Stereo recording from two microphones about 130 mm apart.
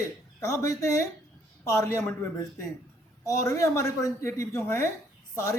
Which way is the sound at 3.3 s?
25° left (ahead or behind).